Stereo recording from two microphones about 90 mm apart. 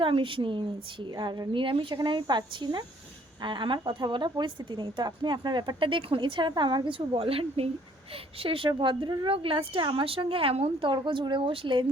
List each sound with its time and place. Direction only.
0.0 s speech: 75° right (ahead or behind)
1.1 s a woman's voice: 50° right (ahead or behind); by 2.0 s 75° right (ahead or behind)
2.0 s a woman's voice: 55° right (ahead or behind); by 11.9 s 70° right (ahead or behind)